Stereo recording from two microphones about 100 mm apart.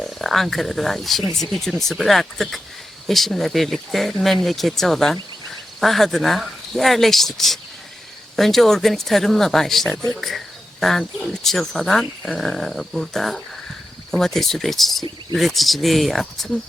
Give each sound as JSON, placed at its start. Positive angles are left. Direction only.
{"t": 0.0, "sound": "speech", "side_deg": 0}